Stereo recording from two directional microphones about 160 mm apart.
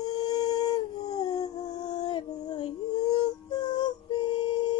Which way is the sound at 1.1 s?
25° left (ahead or behind).